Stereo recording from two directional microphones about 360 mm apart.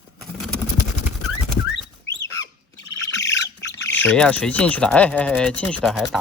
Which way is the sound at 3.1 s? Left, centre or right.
Left.